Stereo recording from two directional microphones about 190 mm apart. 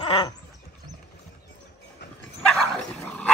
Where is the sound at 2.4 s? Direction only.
5° left (ahead or behind).